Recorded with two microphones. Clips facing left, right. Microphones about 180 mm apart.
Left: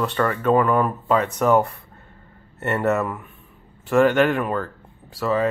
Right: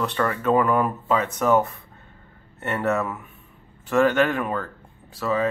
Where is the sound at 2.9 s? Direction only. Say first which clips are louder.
Left 2 dB; centre (ahead or behind).